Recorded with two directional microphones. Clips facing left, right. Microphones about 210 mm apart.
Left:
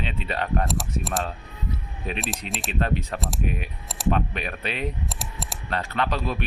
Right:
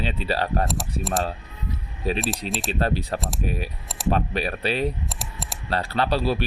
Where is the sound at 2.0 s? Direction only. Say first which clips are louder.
Right 6 dB; 35° right (ahead or behind).